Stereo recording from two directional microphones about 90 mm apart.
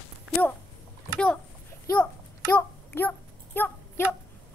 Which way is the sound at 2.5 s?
20° left (ahead or behind).